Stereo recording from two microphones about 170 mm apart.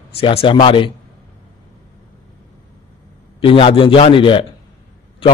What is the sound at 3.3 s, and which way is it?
Speech, 30° left (ahead or behind).